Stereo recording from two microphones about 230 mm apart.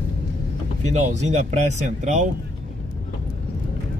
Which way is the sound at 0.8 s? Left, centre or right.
Right.